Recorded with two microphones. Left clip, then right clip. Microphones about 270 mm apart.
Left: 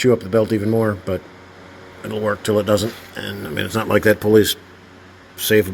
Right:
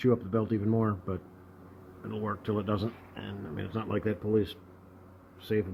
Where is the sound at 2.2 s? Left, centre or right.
Centre.